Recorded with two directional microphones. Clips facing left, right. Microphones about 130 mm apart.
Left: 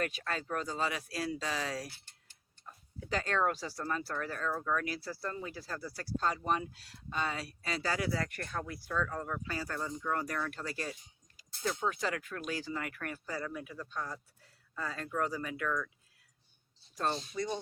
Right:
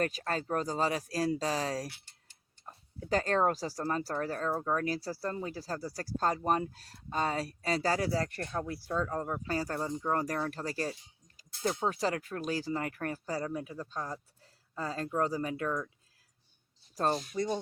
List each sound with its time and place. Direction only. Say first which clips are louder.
0.0 s speech: right 4 dB; 40° right (ahead or behind)
16.9 s speech: right 4 dB; 35° right (ahead or behind)